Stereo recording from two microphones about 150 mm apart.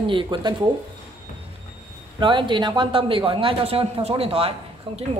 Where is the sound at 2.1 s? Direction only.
35° right (ahead or behind).